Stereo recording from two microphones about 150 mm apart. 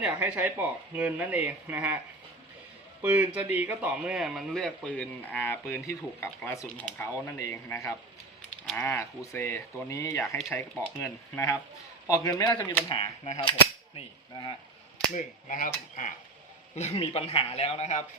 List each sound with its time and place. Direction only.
0.0 s a man's voice: 10° right (ahead or behind)
3.0 s a man's voice: 10° right (ahead or behind); by 12.5 s 20° left (ahead or behind)
12.5 s speech: 10° left (ahead or behind)
12.9 s a man's voice: 35° left (ahead or behind)
15.1 s speech: 60° left (ahead or behind)
16.7 s a man's voice: 45° left (ahead or behind)